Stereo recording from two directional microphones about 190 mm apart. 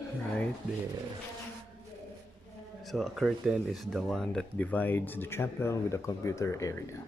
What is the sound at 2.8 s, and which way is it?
Speech, centre (ahead or behind).